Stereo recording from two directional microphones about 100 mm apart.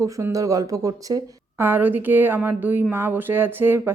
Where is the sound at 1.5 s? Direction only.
20° right (ahead or behind).